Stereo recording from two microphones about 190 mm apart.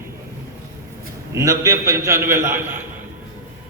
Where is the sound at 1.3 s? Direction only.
15° right (ahead or behind).